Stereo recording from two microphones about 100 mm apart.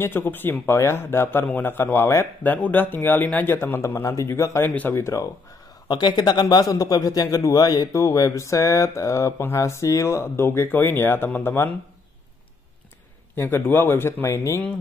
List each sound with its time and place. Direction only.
0.0 s a man's voice: 20° left (ahead or behind)
5.9 s a man's voice: 45° left (ahead or behind); by 11.7 s 25° left (ahead or behind)
13.4 s a man's voice: 20° left (ahead or behind)